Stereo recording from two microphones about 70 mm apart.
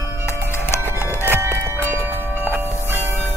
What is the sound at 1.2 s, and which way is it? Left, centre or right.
Music, right.